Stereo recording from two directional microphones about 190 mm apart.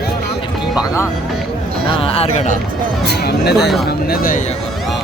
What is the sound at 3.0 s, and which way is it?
Speech, 60° left (ahead or behind).